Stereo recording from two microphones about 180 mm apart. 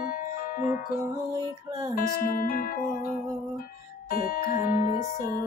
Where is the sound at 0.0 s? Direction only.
55° left (ahead or behind).